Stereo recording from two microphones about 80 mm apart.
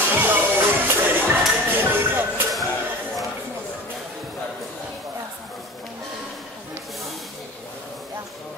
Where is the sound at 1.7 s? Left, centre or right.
Right.